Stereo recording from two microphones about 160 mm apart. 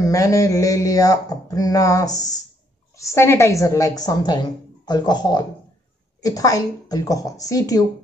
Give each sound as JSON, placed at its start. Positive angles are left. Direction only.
{"t": 0.0, "sound": "a woman's voice", "side_deg": 20}